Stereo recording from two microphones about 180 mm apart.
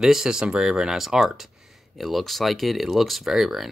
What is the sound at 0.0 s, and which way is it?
Speech, centre (ahead or behind).